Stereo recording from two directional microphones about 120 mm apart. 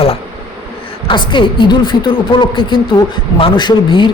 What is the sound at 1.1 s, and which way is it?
A man's voice, 45° left (ahead or behind).